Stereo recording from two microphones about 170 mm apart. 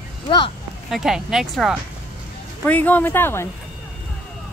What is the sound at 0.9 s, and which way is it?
Speech, centre (ahead or behind).